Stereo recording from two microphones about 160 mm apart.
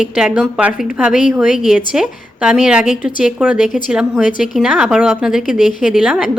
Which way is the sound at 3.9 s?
5° right (ahead or behind).